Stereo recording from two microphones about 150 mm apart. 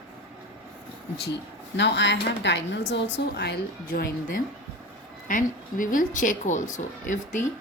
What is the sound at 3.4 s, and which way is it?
Speech, 90° left.